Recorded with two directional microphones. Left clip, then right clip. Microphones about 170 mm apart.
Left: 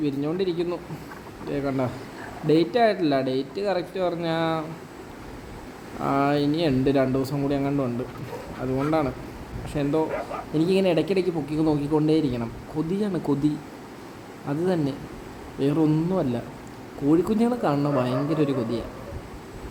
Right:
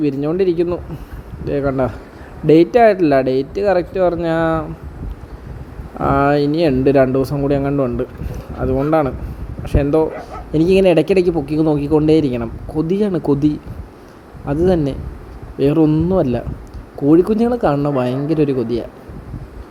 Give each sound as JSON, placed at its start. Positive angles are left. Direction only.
{"t": 0.0, "sound": "speech", "side_deg": -35}
{"t": 6.0, "sound": "speech", "side_deg": -35}